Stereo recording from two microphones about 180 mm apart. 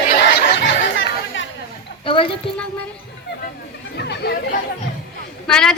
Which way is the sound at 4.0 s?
70° left (ahead or behind).